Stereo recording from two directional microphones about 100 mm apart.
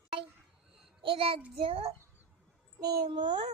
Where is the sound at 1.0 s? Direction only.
65° right (ahead or behind).